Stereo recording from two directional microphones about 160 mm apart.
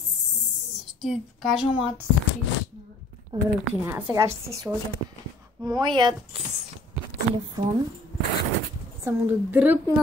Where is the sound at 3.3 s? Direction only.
25° right (ahead or behind).